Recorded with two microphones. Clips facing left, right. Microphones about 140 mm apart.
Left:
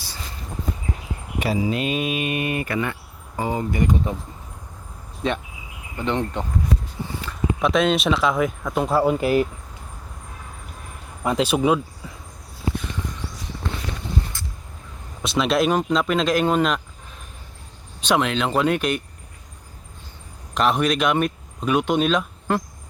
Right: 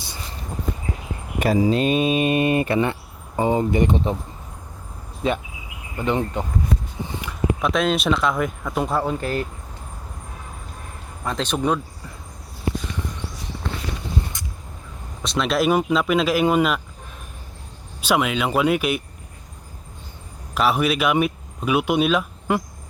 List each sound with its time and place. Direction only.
1.4 s speech: 45° right (ahead or behind)
1.7 s speech: 35° right (ahead or behind)
5.2 s speech: 5° right (ahead or behind)
7.0 s a sound: 15° right (ahead or behind)
7.6 s speech: centre (ahead or behind)
11.2 s speech: 10° left (ahead or behind)
14.3 s a sound: 20° right (ahead or behind)
15.2 s speech: centre (ahead or behind)
18.0 s speech: 5° right (ahead or behind)
20.5 s speech: 5° right (ahead or behind)